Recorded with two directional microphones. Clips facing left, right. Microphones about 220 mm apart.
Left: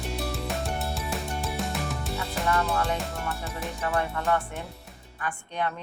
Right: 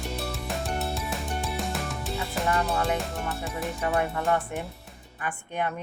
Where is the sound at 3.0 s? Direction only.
Centre (ahead or behind).